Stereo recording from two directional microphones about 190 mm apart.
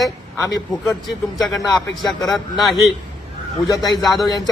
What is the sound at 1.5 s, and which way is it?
A man's voice, 20° left (ahead or behind).